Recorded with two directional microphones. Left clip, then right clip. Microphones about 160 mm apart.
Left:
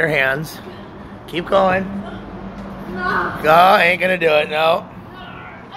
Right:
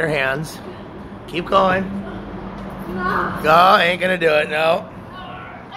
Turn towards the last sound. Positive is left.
turn(degrees=0)  # may be behind; listen again after turning